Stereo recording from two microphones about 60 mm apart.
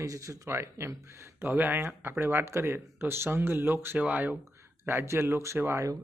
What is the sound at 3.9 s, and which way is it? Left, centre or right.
Speech, right.